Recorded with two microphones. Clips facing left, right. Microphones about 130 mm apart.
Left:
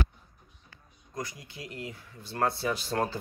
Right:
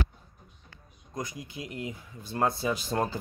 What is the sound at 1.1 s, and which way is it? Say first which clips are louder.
Speech: right 2 dB; 20° right (ahead or behind).